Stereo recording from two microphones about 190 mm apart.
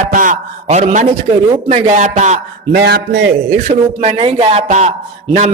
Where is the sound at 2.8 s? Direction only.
60° right (ahead or behind).